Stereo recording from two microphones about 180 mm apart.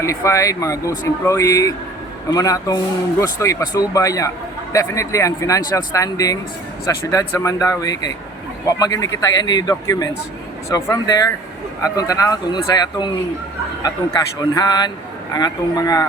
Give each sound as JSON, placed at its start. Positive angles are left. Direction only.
{"t": 0.0, "sound": "speech", "side_deg": 15}
{"t": 14.5, "sound": "speech", "side_deg": 20}